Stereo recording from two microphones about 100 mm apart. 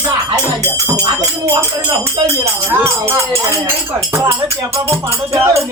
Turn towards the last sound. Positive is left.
turn(degrees=-30)  # may be behind; listen again after turning